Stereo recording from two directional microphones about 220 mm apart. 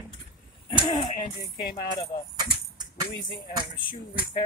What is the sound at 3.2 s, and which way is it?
Music, 20° left (ahead or behind).